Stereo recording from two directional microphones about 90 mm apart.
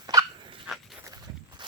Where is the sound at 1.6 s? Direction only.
60° right (ahead or behind).